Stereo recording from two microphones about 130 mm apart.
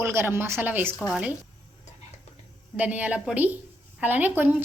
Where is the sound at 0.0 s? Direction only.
20° right (ahead or behind).